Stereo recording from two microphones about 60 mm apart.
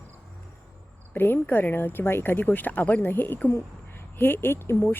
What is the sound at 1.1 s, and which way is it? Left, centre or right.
A woman's voice, left.